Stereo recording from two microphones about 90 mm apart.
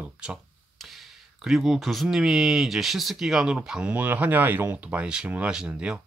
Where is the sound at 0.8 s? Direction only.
Centre (ahead or behind).